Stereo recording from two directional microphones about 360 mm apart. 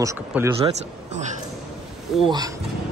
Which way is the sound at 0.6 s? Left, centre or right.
Centre.